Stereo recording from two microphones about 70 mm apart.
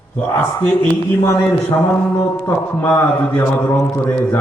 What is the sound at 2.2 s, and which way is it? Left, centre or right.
Speech, left.